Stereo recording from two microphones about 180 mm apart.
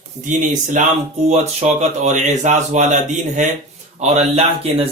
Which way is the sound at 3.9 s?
35° right (ahead or behind).